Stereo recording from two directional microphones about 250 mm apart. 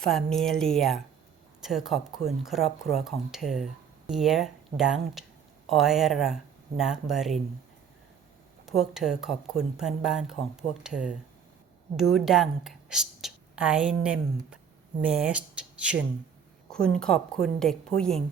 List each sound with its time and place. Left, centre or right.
0.0 s speech: centre
8.6 s a woman's voice: centre